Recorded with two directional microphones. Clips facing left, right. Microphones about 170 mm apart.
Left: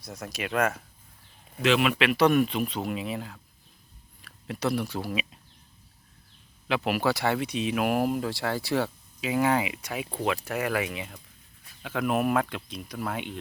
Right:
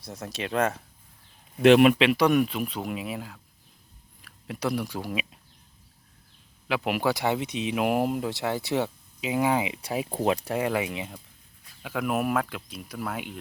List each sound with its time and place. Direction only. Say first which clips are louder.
0.0 s speech: right 1 dB; 30° right (ahead or behind)
1.6 s speech: right 8 dB; 50° right (ahead or behind)
2.1 s speech: even; 10° right (ahead or behind)
6.7 s speech: even; 15° right (ahead or behind)
9.7 s speech: right 4 dB; 35° right (ahead or behind)
11.8 s speech: left 1 dB; 10° right (ahead or behind)